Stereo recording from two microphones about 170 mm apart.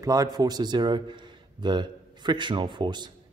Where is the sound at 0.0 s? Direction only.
20° right (ahead or behind).